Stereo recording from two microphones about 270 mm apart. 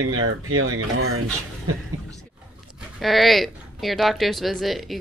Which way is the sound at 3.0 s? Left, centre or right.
Centre.